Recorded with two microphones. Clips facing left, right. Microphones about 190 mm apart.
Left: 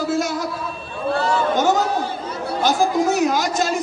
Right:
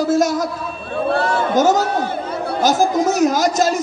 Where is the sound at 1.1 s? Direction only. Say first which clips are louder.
Right 1 dB; 60° right (ahead or behind).